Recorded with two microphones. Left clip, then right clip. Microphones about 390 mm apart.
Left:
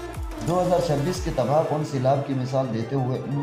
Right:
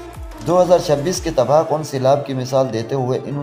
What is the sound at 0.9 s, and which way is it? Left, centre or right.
Speech, right.